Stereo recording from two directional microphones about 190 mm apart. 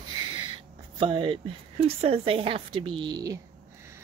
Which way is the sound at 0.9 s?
25° right (ahead or behind).